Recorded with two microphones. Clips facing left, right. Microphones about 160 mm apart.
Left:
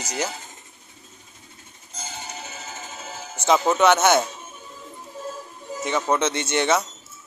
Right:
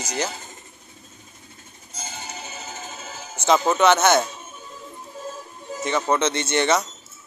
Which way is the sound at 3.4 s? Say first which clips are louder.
Even; 5° left (ahead or behind).